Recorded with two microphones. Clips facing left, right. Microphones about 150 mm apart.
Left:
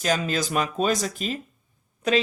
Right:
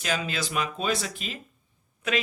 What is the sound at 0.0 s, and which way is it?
Speech, 40° left (ahead or behind).